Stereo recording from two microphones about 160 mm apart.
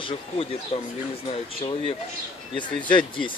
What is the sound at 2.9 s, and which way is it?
Speech, 30° left (ahead or behind).